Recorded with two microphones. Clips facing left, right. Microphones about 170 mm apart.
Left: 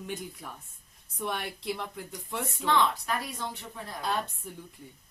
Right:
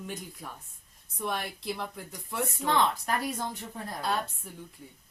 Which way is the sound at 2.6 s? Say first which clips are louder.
Left 1 dB; 45° right (ahead or behind).